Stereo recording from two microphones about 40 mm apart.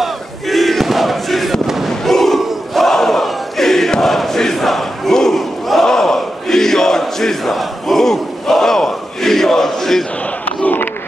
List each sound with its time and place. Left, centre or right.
0.0 s crowd: centre
5.7 s battle cry: centre
10.4 s battle cry: left